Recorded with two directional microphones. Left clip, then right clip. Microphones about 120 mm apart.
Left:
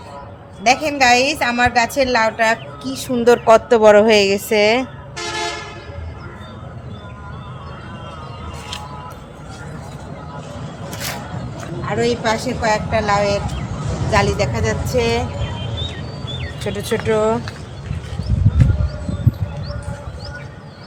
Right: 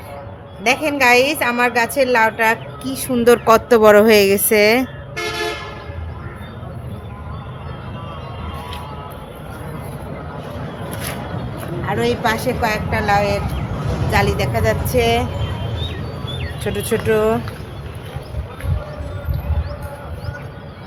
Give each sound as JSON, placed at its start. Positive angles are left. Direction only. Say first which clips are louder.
{"t": 0.6, "sound": "a woman's voice", "louder": "left 1 dB", "side_deg": -25}
{"t": 5.1, "sound": "toot", "louder": "right 1 dB", "side_deg": 65}
{"t": 11.9, "sound": "a woman's voice", "louder": "even", "side_deg": -15}
{"t": 16.4, "sound": "speech", "louder": "right 2 dB", "side_deg": -5}